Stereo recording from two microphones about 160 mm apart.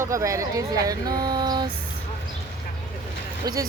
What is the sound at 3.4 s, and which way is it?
Speech, 20° right (ahead or behind).